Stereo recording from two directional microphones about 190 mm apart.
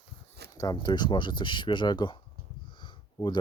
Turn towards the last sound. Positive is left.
turn(degrees=25)  # may be behind; listen again after turning